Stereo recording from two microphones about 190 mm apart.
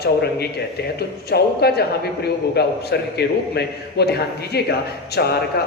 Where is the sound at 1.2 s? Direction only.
55° left (ahead or behind).